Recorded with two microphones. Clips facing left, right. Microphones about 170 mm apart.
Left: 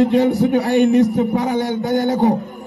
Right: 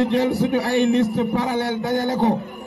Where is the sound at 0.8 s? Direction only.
40° left (ahead or behind).